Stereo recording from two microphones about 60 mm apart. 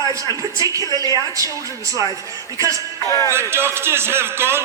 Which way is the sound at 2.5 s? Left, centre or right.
Right.